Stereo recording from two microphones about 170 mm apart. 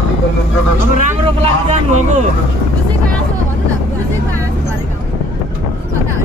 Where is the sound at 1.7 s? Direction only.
45° right (ahead or behind).